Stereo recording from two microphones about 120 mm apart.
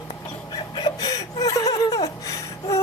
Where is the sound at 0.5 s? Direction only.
35° left (ahead or behind).